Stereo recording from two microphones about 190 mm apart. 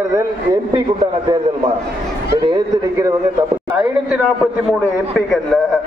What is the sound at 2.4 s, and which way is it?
Speech, 20° right (ahead or behind).